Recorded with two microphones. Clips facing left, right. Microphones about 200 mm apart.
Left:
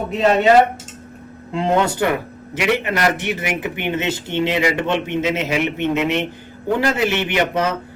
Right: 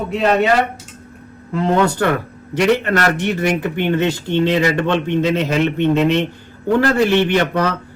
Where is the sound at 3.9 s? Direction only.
20° left (ahead or behind).